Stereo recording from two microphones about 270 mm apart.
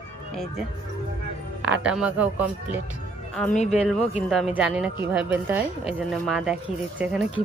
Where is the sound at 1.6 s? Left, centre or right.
Centre.